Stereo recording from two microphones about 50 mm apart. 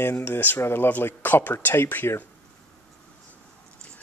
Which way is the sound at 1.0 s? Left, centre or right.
Left.